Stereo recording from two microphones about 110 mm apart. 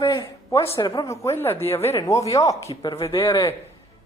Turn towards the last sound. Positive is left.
turn(degrees=55)  # may be behind; listen again after turning